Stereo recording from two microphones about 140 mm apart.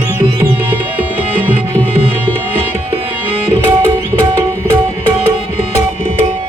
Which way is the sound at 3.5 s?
20° right (ahead or behind).